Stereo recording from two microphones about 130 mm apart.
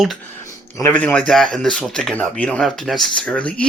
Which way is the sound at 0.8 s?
10° left (ahead or behind).